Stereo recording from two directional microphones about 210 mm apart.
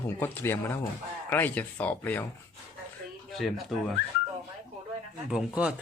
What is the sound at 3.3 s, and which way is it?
Speech, centre (ahead or behind).